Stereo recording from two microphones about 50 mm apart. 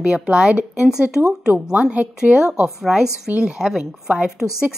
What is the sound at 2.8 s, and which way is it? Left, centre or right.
Speech, centre.